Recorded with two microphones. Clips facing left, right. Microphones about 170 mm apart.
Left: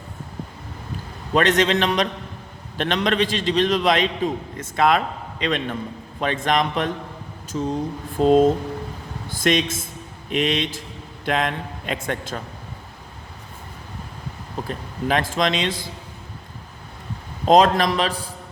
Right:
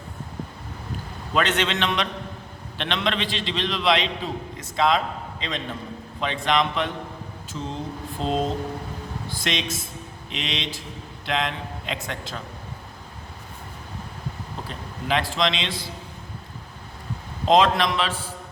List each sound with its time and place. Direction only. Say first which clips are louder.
1.3 s a man's voice: left 5 dB; 40° left (ahead or behind); by 5.6 s 60° left (ahead or behind)
6.1 s a man's voice: left 2 dB; 50° left (ahead or behind)
14.7 s a man's voice: left 3 dB; 45° left (ahead or behind)
17.5 s a man's voice: left 3 dB; 45° left (ahead or behind)